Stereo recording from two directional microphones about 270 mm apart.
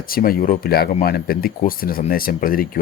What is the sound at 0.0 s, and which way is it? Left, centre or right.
Speech, left.